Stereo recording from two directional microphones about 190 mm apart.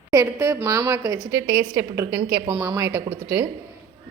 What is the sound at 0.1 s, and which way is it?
A woman's voice, 15° right (ahead or behind).